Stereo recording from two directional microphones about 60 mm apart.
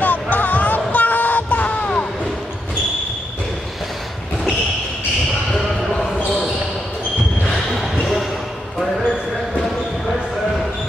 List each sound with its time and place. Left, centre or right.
0.0 s music: left
7.7 s basketball bounce: centre